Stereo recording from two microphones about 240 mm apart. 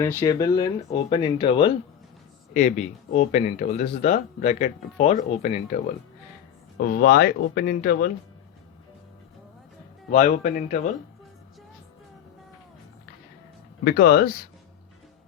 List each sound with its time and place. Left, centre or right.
0.0 s speech: centre; by 8.1 s left
10.1 s speech: left
13.8 s speech: left